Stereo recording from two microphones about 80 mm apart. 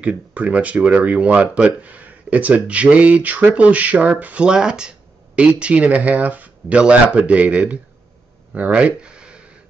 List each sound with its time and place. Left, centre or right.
0.0 s speech: centre